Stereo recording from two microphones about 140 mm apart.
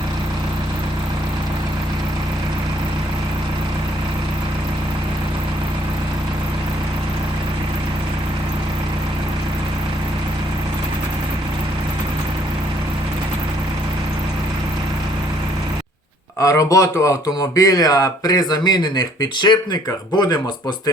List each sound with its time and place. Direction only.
16.4 s speech: 25° left (ahead or behind)